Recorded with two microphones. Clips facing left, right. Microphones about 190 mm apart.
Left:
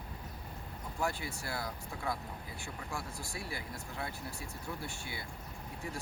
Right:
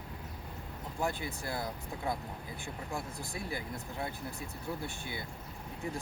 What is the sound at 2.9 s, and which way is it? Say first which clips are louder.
Speech: right 2 dB; 20° right (ahead or behind).